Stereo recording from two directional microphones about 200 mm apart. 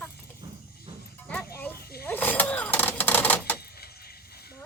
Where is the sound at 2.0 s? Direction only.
10° left (ahead or behind).